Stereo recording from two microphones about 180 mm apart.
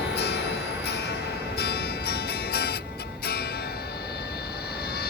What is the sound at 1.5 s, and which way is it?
Music, 60° left (ahead or behind).